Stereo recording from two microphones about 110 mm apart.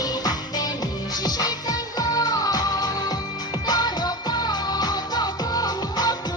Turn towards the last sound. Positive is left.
turn(degrees=35)  # may be behind; listen again after turning